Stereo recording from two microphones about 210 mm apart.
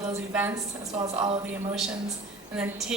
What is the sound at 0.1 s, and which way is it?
Speech, 10° right (ahead or behind).